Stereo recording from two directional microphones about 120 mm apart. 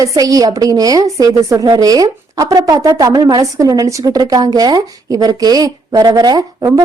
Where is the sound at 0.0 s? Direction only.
30° right (ahead or behind).